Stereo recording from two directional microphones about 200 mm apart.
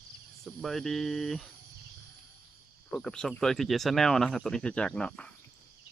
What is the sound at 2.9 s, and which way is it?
Speech, 5° left (ahead or behind).